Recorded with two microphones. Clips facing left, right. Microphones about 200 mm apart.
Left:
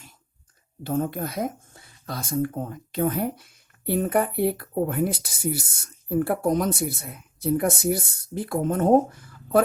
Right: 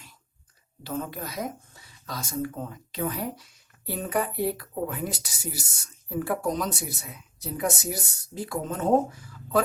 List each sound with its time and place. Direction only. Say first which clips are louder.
0.9 s speech: left 6 dB; 50° left (ahead or behind)